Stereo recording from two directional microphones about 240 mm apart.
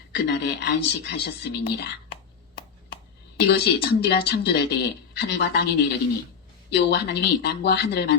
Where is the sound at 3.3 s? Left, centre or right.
Left.